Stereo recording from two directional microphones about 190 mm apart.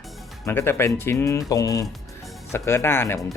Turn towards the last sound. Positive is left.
turn(degrees=10)  # may be behind; listen again after turning